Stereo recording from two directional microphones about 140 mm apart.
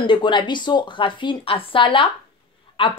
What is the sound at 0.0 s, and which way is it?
A woman's voice, 35° left (ahead or behind).